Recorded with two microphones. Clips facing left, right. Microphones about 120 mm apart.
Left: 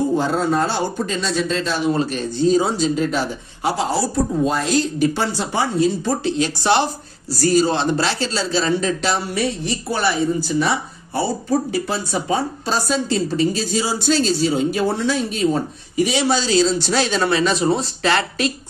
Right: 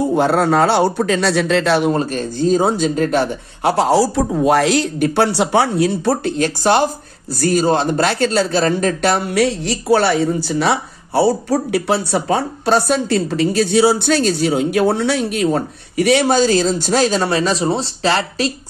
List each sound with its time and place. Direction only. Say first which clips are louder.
0.1 s speech: right 4 dB; 65° right (ahead or behind)
1.9 s speech: right 2 dB; 45° right (ahead or behind)